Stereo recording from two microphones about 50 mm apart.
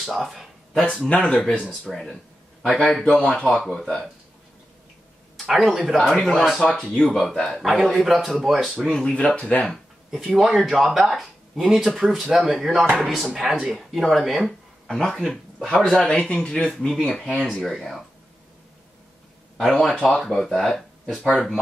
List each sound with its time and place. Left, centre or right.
0.0 s speech: centre
0.7 s speech: left
1.9 s speech: centre
5.4 s speech: centre
8.7 s speech: centre
10.1 s speech: centre
14.9 s speech: centre
16.7 s speech: centre
19.8 s speech: centre